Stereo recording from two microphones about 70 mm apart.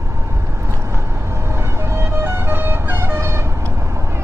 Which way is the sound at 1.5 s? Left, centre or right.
Right.